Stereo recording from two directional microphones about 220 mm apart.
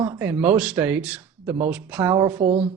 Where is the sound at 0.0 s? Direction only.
5° right (ahead or behind).